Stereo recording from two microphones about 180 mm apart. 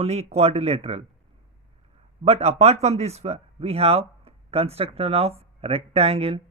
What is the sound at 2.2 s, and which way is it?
Speech, 35° right (ahead or behind).